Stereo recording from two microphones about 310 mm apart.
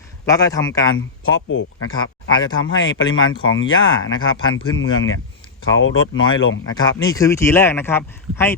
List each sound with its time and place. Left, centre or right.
0.3 s a man's voice: centre
0.9 s speech: left
6.7 s a man's voice: centre